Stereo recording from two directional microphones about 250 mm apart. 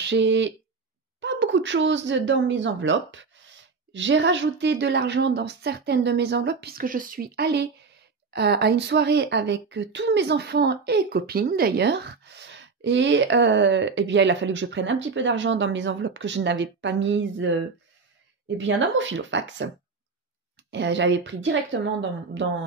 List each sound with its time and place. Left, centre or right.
0.0 s a woman's voice: right
20.7 s a woman's voice: right